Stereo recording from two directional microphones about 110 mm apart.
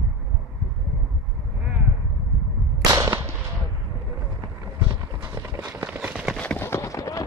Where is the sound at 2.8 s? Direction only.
30° right (ahead or behind).